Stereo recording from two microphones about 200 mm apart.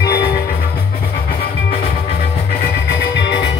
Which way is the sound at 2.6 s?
55° left (ahead or behind).